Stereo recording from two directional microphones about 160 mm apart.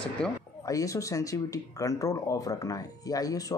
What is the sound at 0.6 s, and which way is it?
Speech, 20° left (ahead or behind).